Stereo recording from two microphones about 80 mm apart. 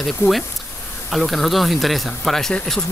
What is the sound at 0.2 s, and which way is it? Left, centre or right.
Speech, left.